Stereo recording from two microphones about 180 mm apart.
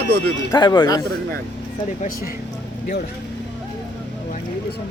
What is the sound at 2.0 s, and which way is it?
Speech, 50° left (ahead or behind).